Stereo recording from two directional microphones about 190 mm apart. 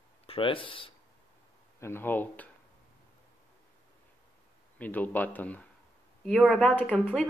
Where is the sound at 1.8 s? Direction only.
10° left (ahead or behind).